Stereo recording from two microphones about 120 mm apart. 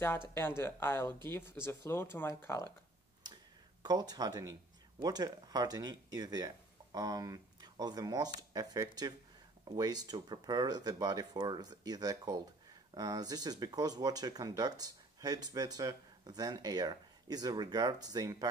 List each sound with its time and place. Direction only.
0.3 s speech: 20° left (ahead or behind)
3.8 s speech: 35° right (ahead or behind)